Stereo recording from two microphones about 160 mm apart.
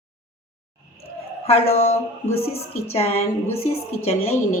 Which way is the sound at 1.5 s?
40° left (ahead or behind).